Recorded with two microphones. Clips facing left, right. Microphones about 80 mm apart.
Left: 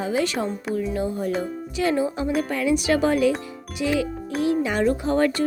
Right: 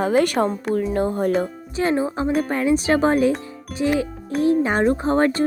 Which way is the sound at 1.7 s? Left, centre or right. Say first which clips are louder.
Right 2 dB; right.